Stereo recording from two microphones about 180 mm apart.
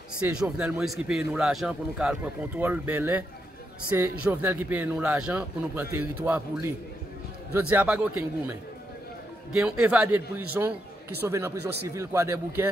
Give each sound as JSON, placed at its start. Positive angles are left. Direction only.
{"t": 0.2, "sound": "a man's voice", "side_deg": -5}